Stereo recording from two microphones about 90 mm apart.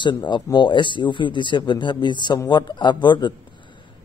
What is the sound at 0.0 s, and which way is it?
Speech, 60° left (ahead or behind).